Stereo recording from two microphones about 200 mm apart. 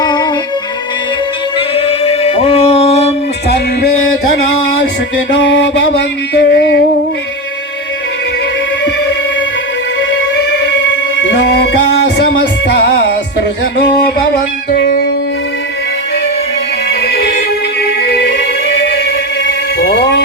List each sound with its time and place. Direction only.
0.0 s music: 20° left (ahead or behind)
1.5 s music: 30° left (ahead or behind)
5.4 s a sound: 60° left (ahead or behind)
13.8 s music: 55° left (ahead or behind)
19.5 s music: 60° left (ahead or behind)